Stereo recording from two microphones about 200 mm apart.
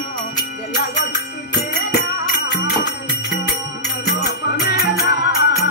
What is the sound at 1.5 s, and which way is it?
Music, 60° left (ahead or behind).